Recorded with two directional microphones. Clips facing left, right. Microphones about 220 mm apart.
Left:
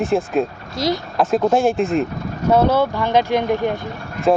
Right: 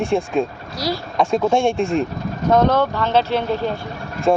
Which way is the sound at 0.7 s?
20° left (ahead or behind).